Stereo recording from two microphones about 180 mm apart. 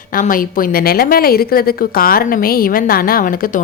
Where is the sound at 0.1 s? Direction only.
50° left (ahead or behind).